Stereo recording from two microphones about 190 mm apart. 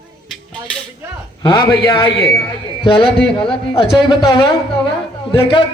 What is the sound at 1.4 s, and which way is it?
Speech, 20° left (ahead or behind).